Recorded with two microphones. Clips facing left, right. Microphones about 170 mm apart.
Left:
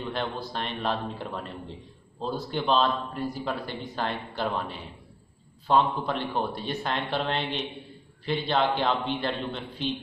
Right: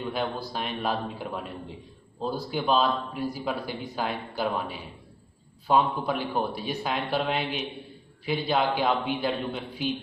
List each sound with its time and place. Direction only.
0.0 s speech: 5° right (ahead or behind)
2.5 s speech: 5° right (ahead or behind)